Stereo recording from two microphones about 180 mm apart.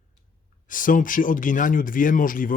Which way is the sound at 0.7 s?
50° left (ahead or behind).